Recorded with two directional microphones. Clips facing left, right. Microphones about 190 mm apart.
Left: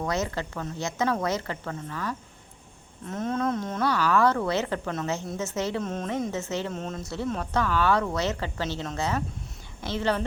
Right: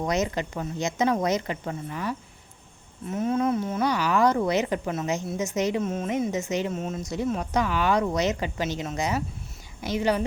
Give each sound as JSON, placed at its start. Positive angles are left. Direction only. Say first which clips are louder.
{"t": 0.0, "sound": "speech", "louder": "right 3 dB", "side_deg": -20}